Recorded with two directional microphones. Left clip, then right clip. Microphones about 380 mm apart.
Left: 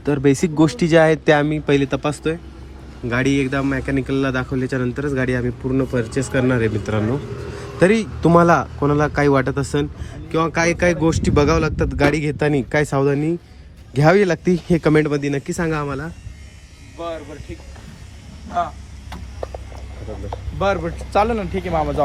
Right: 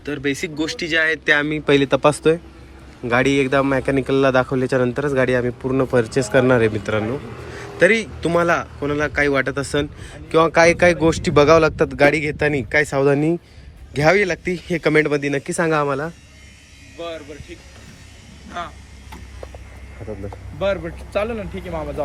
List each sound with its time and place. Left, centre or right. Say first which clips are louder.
0.0 s speech: left 6 dB; centre
7.8 s speech: right 1 dB; centre
20.6 s speech: left 2 dB; centre